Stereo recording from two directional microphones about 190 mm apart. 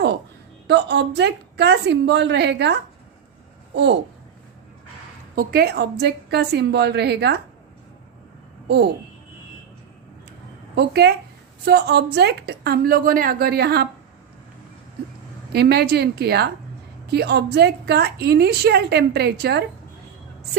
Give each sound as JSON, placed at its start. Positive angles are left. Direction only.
{"t": 0.7, "sound": "a woman's voice", "side_deg": -60}
{"t": 5.3, "sound": "a woman's voice", "side_deg": -50}
{"t": 8.6, "sound": "speech", "side_deg": -60}
{"t": 10.8, "sound": "a woman's voice", "side_deg": -60}
{"t": 15.5, "sound": "a woman's voice", "side_deg": -60}